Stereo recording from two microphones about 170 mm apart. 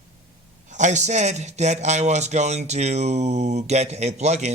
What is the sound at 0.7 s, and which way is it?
A man's voice, 45° right (ahead or behind).